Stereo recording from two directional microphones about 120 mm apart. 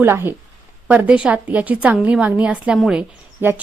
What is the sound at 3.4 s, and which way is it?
Speech, 15° right (ahead or behind).